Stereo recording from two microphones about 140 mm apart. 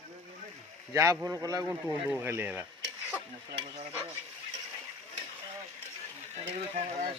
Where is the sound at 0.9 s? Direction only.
20° right (ahead or behind).